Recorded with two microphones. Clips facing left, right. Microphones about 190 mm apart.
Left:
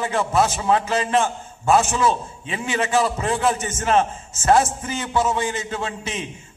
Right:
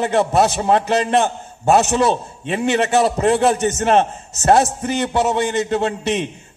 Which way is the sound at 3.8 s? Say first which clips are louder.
Right 2 dB; 40° right (ahead or behind).